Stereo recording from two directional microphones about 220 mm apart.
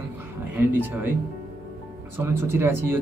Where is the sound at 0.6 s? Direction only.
10° right (ahead or behind).